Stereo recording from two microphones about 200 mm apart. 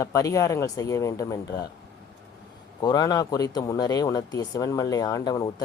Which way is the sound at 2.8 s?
20° left (ahead or behind).